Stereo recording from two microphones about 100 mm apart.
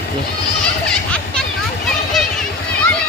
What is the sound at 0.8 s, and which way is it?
Children playing, 5° left (ahead or behind).